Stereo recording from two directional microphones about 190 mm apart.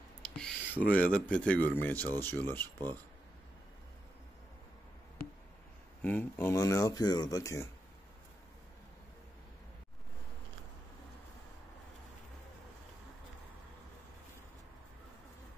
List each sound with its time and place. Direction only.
0.2 s a sound: 5° left (ahead or behind)
0.9 s speech: 5° left (ahead or behind)
6.0 s speech: 10° left (ahead or behind)